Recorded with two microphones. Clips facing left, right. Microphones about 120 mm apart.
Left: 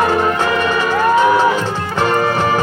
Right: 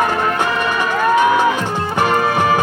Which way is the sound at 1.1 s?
15° right (ahead or behind).